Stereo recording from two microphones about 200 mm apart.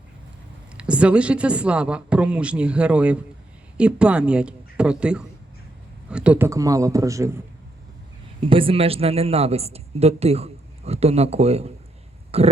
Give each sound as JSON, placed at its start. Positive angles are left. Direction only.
{"t": 0.8, "sound": "a man's voice", "side_deg": -5}
{"t": 8.4, "sound": "a man's voice", "side_deg": -25}